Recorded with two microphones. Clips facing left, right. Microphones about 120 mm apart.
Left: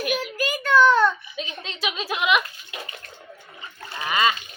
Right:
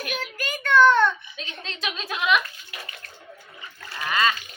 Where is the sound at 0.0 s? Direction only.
5° left (ahead or behind).